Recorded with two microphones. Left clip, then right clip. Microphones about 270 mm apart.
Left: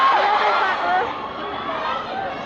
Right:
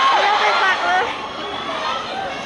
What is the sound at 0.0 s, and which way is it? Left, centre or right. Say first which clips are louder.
Vehicle: right 1 dB; centre.